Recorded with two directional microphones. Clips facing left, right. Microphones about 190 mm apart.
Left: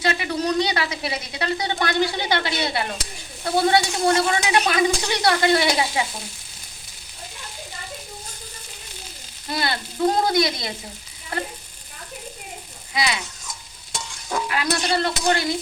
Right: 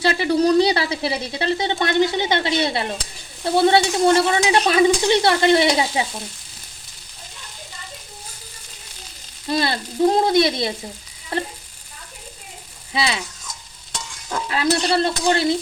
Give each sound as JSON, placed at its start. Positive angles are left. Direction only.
{"t": 0.0, "sound": "speech", "side_deg": -30}
{"t": 9.5, "sound": "speech", "side_deg": -25}
{"t": 12.9, "sound": "speech", "side_deg": -30}
{"t": 14.4, "sound": "speech", "side_deg": -30}